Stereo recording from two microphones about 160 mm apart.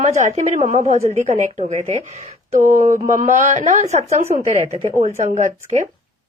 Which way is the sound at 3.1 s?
50° right (ahead or behind).